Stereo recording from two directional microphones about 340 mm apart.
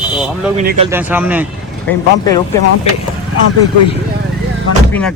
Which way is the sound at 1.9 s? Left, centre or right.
Centre.